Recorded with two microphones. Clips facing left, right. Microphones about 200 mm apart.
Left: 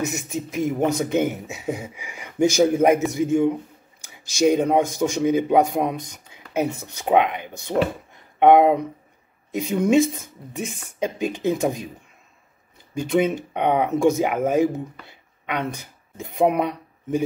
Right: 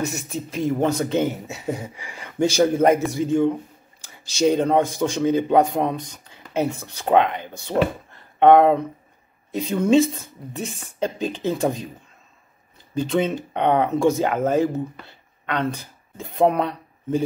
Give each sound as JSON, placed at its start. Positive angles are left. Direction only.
{"t": 0.0, "sound": "speech", "side_deg": 15}
{"t": 12.9, "sound": "speech", "side_deg": 15}